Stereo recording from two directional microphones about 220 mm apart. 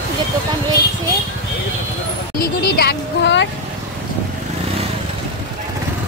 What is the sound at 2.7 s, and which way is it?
Speech, 50° left (ahead or behind).